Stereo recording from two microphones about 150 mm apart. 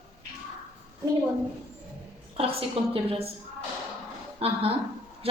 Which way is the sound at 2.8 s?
40° right (ahead or behind).